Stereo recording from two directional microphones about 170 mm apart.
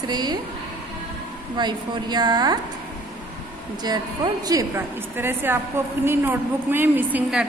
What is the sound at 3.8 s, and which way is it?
A woman's voice, 25° right (ahead or behind).